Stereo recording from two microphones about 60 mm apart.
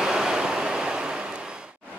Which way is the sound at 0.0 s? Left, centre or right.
Centre.